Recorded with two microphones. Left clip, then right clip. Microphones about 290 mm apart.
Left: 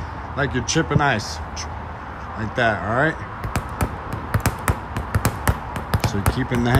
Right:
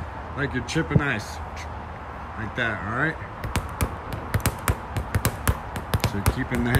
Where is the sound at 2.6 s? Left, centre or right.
Centre.